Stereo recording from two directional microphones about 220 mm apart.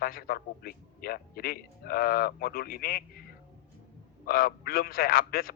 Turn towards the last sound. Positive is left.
turn(degrees=40)  # may be behind; listen again after turning